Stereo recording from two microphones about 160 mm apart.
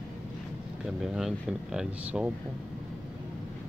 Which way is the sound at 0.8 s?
5° right (ahead or behind).